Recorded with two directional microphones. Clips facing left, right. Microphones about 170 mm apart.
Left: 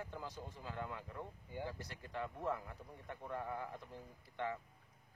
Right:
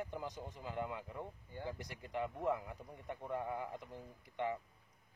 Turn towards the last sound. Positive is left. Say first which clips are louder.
# right 3 dB
turn(degrees=-15)  # may be behind; listen again after turning